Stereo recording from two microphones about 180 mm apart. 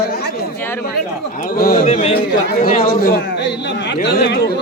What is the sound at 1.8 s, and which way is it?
Speech, 35° left (ahead or behind).